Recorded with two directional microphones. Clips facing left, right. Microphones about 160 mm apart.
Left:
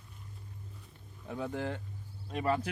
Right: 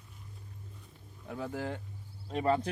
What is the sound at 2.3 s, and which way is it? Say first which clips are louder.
Speech: right 2 dB; 30° right (ahead or behind).